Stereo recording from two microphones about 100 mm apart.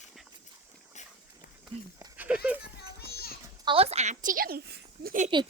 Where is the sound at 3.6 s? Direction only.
75° right (ahead or behind).